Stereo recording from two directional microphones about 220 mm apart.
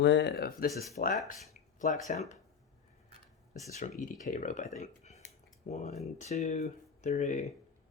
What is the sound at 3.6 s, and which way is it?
Speech, 35° left (ahead or behind).